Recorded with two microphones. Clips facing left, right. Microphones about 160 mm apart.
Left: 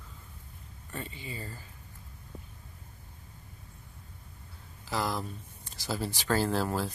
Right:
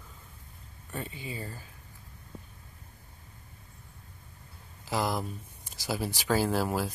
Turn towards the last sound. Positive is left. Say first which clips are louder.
# right 1 dB
turn(degrees=-10)  # may be behind; listen again after turning